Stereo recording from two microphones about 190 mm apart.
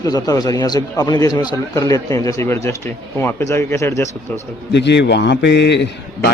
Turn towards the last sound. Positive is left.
turn(degrees=65)  # may be behind; listen again after turning